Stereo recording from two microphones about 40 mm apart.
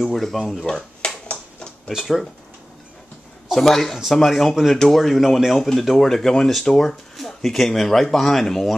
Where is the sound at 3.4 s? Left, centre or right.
Centre.